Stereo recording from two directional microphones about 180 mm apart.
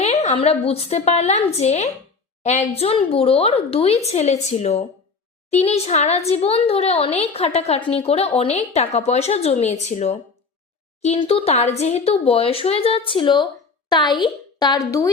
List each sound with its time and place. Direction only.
0.0 s a woman's voice: 35° left (ahead or behind); by 15.1 s 20° left (ahead or behind)